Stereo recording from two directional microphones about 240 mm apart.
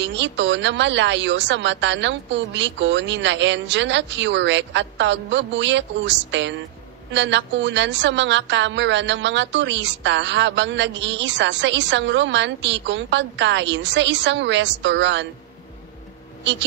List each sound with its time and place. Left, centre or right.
0.0 s a woman's voice: right